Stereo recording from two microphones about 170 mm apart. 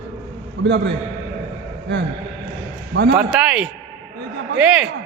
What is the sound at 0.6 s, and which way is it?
Speech, 90° right.